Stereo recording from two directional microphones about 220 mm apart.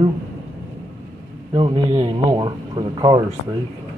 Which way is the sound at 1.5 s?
20° right (ahead or behind).